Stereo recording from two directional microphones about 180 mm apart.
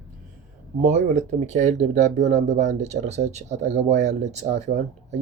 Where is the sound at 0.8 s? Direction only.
40° right (ahead or behind).